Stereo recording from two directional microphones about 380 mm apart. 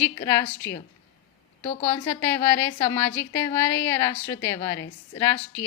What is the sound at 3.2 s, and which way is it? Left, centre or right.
A woman's voice, centre.